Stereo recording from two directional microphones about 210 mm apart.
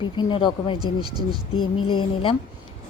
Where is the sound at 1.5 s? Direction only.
85° left.